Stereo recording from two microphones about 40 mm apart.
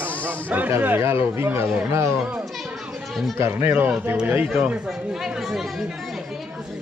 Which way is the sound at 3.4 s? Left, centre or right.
Right.